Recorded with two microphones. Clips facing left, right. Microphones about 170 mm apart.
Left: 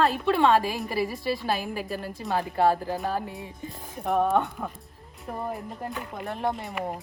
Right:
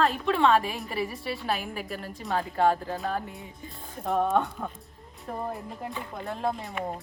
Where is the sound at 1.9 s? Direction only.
Centre (ahead or behind).